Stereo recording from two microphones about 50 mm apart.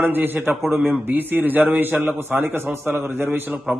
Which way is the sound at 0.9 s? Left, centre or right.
Right.